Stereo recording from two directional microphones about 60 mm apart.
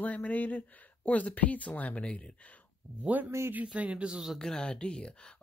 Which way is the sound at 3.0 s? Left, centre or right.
Right.